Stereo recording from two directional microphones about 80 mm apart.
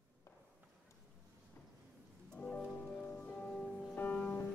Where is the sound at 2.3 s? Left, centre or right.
Centre.